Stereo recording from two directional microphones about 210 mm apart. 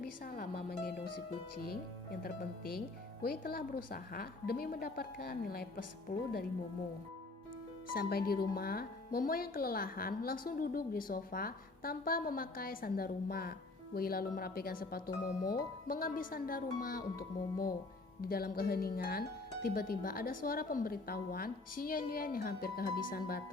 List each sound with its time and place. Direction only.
0.0 s speech: 45° left (ahead or behind)
2.2 s speech: 45° left (ahead or behind)
7.9 s speech: 45° left (ahead or behind)